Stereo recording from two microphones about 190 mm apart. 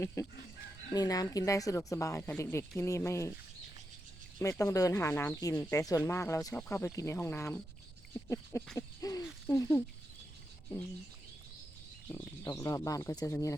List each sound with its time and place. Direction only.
0.9 s speech: 20° left (ahead or behind)
4.4 s speech: 15° left (ahead or behind)
12.0 s speech: 15° left (ahead or behind)